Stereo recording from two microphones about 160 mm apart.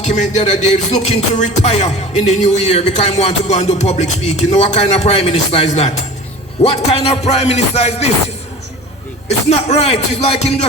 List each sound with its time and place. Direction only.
0.0 s music: 50° left (ahead or behind)
9.5 s music: 40° left (ahead or behind)